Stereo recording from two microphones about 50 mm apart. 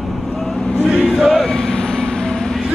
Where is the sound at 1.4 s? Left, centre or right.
Centre.